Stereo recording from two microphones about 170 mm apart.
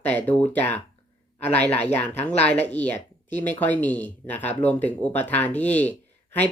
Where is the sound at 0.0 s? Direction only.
10° left (ahead or behind).